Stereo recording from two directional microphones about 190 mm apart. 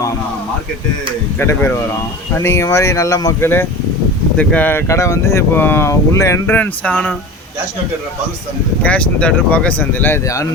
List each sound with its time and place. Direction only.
1.4 s speech: 15° left (ahead or behind)
8.8 s speech: 5° left (ahead or behind)